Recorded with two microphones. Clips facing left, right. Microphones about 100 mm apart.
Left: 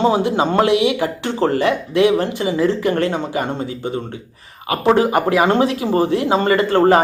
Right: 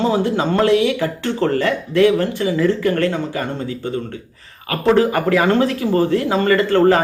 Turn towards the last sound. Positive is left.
turn(degrees=20)  # may be behind; listen again after turning